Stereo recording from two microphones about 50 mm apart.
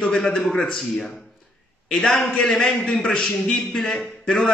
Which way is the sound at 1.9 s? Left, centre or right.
Centre.